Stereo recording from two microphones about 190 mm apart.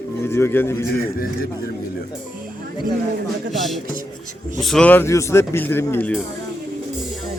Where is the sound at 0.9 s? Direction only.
50° left (ahead or behind).